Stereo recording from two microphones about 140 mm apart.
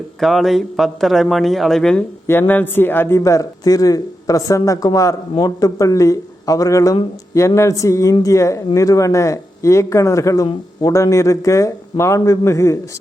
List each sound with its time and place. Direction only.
0.2 s a man's voice: centre (ahead or behind)
2.2 s speech: 15° left (ahead or behind)